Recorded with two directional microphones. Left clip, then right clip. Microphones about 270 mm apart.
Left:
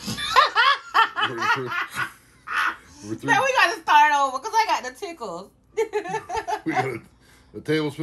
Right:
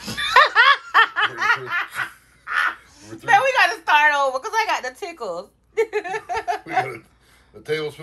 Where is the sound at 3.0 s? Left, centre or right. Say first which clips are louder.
Right 4 dB; centre.